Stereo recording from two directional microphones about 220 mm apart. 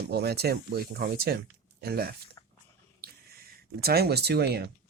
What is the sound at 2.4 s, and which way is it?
Dog, 15° left (ahead or behind).